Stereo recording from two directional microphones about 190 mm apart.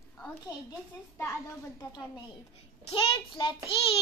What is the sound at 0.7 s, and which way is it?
Speech, 15° left (ahead or behind).